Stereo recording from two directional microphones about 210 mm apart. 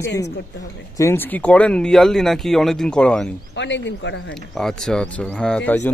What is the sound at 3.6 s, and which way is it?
Speech, 60° left (ahead or behind).